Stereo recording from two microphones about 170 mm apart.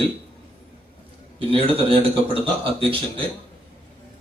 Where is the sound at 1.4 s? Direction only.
35° right (ahead or behind).